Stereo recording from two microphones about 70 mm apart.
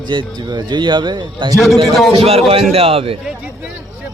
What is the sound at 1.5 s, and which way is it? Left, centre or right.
Speech, centre.